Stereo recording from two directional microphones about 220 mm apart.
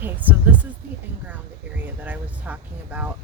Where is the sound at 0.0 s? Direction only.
10° right (ahead or behind).